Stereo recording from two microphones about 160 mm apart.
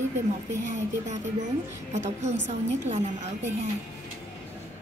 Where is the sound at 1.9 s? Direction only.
45° right (ahead or behind).